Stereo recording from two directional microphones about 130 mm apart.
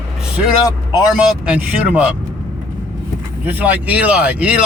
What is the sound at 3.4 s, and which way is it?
Speech, 10° right (ahead or behind).